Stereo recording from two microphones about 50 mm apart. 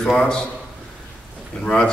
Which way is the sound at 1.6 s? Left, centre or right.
Centre.